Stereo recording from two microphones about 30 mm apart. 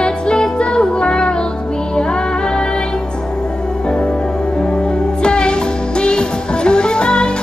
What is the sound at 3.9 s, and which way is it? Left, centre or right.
Music, left.